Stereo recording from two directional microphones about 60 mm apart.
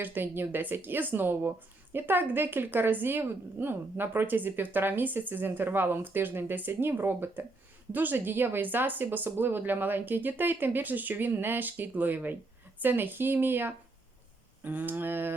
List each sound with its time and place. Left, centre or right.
0.0 s speech: right